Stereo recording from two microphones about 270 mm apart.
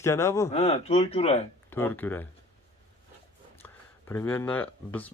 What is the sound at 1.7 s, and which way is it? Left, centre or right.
Speech, centre.